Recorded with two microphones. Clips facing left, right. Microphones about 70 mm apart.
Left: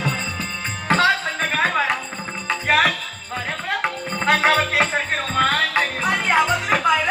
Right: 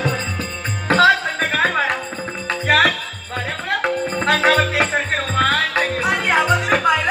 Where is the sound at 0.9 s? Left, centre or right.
Right.